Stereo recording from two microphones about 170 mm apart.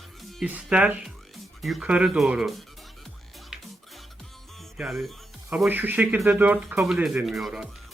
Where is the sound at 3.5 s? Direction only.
5° right (ahead or behind).